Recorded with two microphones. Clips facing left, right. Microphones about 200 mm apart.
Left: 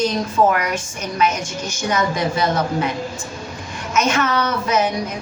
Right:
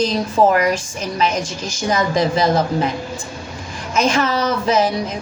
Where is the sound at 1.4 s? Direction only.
90° right.